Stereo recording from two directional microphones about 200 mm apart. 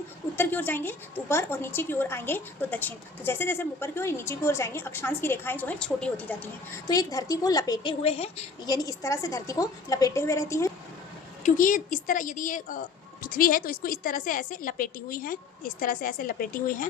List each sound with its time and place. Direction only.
0.3 s a woman's voice: 10° left (ahead or behind)
6.8 s a woman's voice: 20° left (ahead or behind)
8.0 s a woman's voice: 30° left (ahead or behind); by 10.7 s 15° left (ahead or behind)
11.4 s a woman's voice: 40° left (ahead or behind)